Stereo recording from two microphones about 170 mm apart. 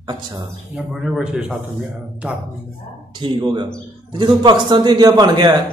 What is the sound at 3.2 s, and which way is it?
A man's voice, 30° right (ahead or behind).